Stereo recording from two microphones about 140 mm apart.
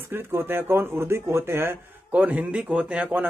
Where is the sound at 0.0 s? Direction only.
15° right (ahead or behind).